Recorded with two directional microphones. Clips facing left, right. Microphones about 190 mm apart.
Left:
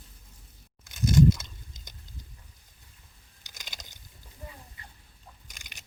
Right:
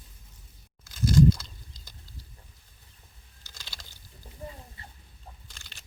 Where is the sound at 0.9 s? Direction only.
20° left (ahead or behind).